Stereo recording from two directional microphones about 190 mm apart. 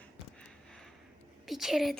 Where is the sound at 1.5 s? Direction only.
Centre (ahead or behind).